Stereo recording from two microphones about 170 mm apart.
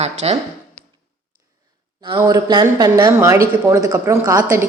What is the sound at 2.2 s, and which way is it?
Speech, 20° right (ahead or behind).